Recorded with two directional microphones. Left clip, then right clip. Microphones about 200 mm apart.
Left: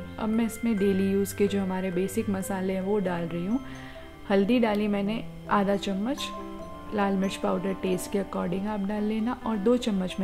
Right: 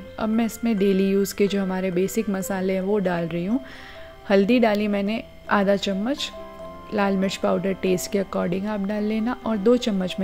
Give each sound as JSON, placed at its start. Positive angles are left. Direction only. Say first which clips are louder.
{"t": 0.2, "sound": "speech", "louder": "right 4 dB", "side_deg": -20}